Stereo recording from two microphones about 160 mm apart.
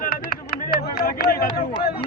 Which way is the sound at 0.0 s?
65° left (ahead or behind).